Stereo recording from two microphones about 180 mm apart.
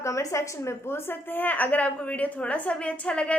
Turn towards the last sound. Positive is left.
turn(degrees=5)  # may be behind; listen again after turning